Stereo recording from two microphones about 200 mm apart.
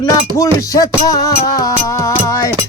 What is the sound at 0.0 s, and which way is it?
Music, 20° left (ahead or behind).